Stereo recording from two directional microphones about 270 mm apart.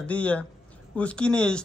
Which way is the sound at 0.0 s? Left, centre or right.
Centre.